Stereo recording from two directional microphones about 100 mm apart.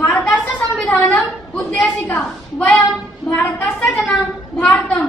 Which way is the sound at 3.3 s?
20° left (ahead or behind).